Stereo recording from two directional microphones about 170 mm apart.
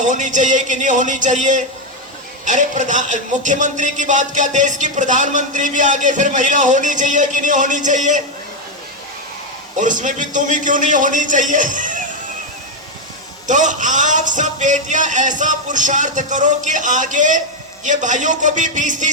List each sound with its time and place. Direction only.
0.0 s music: 45° right (ahead or behind)
9.7 s music: 50° right (ahead or behind)
13.5 s music: 45° right (ahead or behind)